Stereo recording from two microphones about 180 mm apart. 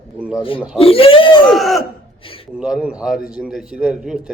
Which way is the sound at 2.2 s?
30° left (ahead or behind).